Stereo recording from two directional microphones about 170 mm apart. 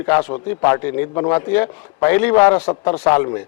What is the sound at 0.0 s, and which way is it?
A man's voice, 10° left (ahead or behind).